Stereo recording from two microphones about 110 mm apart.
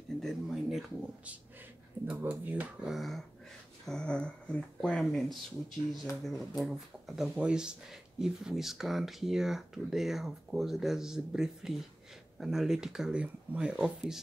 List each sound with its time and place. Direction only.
0.2 s speech: centre (ahead or behind)
2.9 s speech: centre (ahead or behind)